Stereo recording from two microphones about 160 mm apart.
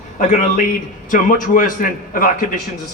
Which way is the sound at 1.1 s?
55° left (ahead or behind).